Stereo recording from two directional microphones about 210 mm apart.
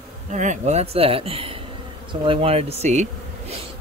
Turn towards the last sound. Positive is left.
turn(degrees=-30)  # may be behind; listen again after turning